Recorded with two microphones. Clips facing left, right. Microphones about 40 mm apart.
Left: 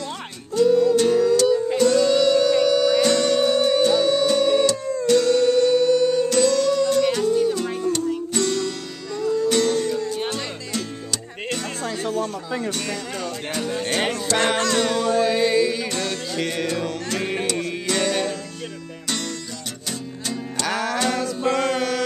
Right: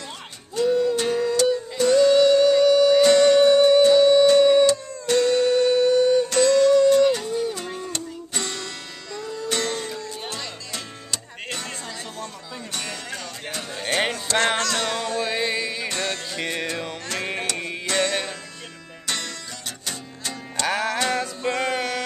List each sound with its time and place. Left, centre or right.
0.6 s music: centre
11.8 s a sound: left
13.2 s music: centre
17.6 s music: centre
20.6 s music: centre